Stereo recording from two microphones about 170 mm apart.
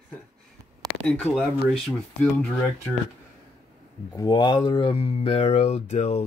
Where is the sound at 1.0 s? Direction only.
5° left (ahead or behind).